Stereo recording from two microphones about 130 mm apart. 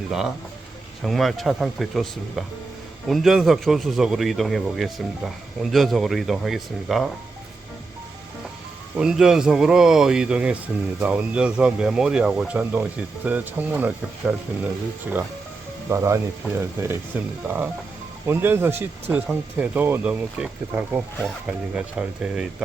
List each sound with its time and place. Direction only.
0.1 s a man's voice: 5° right (ahead or behind)
9.0 s a man's voice: 5° right (ahead or behind)
15.9 s a man's voice: 25° right (ahead or behind); by 22.4 s 5° right (ahead or behind)